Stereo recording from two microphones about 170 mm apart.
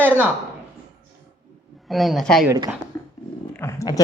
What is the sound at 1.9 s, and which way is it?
Speech, centre (ahead or behind).